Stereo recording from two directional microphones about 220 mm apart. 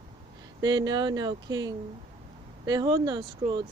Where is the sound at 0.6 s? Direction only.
20° right (ahead or behind).